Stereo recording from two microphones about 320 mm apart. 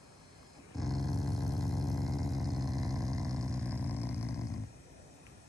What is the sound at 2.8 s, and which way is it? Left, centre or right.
Vehicle, centre.